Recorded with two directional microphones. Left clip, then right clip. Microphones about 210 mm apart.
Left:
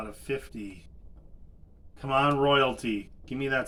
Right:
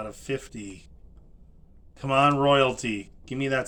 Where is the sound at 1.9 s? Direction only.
40° right (ahead or behind).